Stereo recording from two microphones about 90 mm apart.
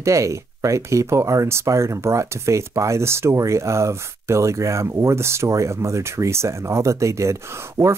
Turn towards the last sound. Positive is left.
turn(degrees=-25)  # may be behind; listen again after turning